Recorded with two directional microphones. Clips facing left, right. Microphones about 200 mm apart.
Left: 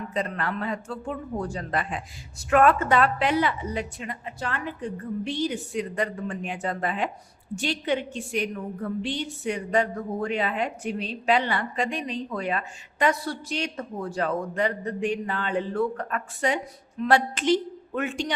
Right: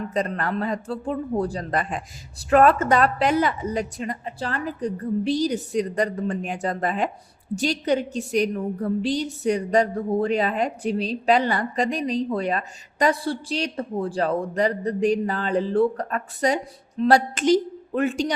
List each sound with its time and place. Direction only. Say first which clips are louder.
0.1 s a woman's voice: right 3 dB; 40° right (ahead or behind)